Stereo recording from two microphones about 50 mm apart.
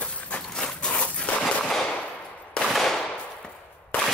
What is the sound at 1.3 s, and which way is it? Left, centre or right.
Machine gun, left.